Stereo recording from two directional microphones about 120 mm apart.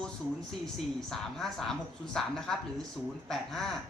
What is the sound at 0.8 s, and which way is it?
A man's voice, 5° left (ahead or behind).